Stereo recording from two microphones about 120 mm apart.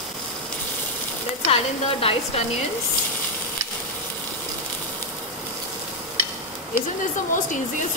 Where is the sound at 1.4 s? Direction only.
55° left (ahead or behind).